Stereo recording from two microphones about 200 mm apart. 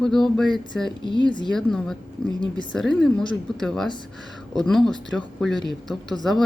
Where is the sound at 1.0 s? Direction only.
25° left (ahead or behind).